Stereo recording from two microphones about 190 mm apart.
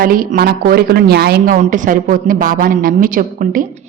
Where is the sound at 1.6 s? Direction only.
45° right (ahead or behind).